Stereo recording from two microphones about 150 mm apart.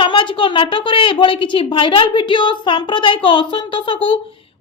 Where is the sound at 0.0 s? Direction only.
35° left (ahead or behind).